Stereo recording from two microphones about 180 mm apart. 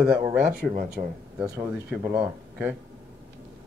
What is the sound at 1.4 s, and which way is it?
Speech, 15° right (ahead or behind).